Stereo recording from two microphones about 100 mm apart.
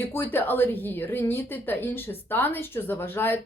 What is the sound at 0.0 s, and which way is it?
Speech, 20° left (ahead or behind).